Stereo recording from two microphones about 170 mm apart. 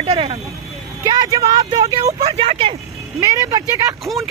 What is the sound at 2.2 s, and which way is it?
Speech, 35° right (ahead or behind).